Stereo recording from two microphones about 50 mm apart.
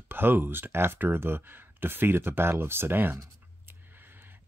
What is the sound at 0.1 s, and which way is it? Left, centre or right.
Speech, right.